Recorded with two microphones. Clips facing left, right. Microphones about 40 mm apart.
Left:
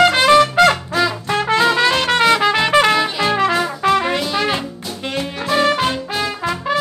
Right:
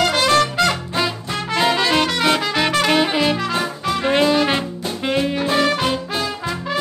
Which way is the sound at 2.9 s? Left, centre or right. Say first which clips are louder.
Even; right.